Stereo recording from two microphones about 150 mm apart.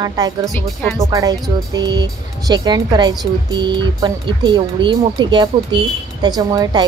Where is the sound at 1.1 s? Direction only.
25° right (ahead or behind).